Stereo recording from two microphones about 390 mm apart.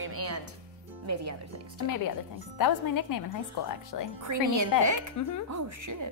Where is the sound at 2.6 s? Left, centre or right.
Left.